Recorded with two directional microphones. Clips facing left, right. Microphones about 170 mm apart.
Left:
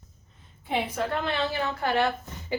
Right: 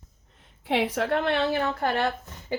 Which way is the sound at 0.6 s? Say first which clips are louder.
Right 3 dB; 90° right.